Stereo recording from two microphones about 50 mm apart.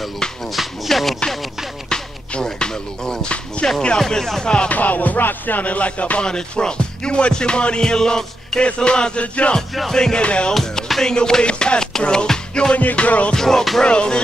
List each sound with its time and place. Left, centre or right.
0.6 s speech: centre
1.9 s music: centre
4.0 s music: centre
4.6 s music: left
6.2 s music: centre
9.8 s music: centre
10.5 s music: centre
12.7 s music: left
13.3 s music: centre